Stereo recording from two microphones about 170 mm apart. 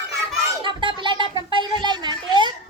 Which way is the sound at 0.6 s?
30° right (ahead or behind).